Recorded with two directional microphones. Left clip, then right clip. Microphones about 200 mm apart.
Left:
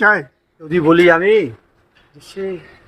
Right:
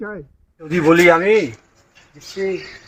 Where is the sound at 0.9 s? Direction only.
25° left (ahead or behind).